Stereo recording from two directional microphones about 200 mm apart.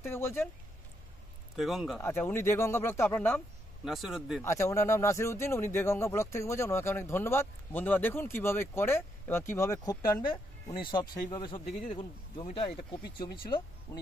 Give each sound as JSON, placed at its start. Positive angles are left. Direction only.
{"t": 0.0, "sound": "speech", "side_deg": 10}
{"t": 1.6, "sound": "speech", "side_deg": 0}
{"t": 2.0, "sound": "speech", "side_deg": 10}
{"t": 4.4, "sound": "speech", "side_deg": 15}